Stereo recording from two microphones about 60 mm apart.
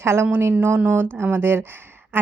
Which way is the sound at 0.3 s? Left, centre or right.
Right.